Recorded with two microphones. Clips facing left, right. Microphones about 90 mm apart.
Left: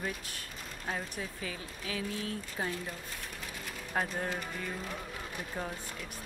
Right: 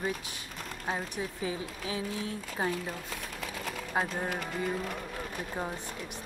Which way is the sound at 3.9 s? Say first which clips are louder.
Right 2 dB; 15° right (ahead or behind).